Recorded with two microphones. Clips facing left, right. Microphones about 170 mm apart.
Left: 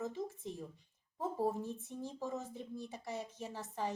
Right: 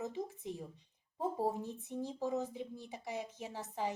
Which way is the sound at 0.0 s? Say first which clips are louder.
Even; 15° right (ahead or behind).